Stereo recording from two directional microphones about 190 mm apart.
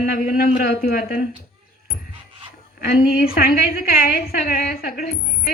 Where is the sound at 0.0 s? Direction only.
50° left (ahead or behind).